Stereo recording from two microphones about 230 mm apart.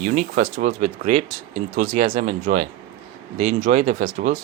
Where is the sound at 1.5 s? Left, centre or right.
Right.